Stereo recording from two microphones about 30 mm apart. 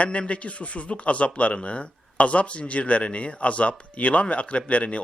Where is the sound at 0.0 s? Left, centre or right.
Left.